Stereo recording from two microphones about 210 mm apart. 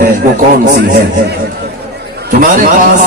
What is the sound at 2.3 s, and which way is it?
Speech, 40° right (ahead or behind).